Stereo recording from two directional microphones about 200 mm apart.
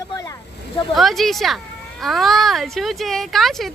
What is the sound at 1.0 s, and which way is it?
A woman's voice, centre (ahead or behind).